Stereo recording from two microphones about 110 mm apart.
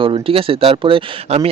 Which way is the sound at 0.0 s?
55° right (ahead or behind).